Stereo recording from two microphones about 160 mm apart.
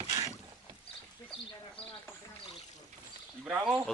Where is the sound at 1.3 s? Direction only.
10° left (ahead or behind).